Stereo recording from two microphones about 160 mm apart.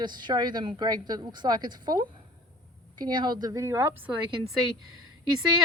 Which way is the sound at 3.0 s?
25° right (ahead or behind).